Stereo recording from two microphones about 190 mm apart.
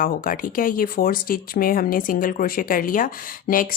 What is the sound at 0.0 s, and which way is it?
Speech, 45° left (ahead or behind).